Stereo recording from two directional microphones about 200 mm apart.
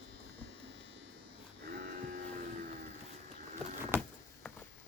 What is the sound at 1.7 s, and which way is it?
Cattle, 50° right (ahead or behind).